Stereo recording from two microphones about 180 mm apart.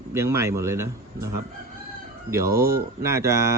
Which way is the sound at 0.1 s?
15° right (ahead or behind).